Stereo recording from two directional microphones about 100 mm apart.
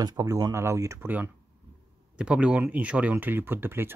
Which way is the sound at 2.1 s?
10° right (ahead or behind).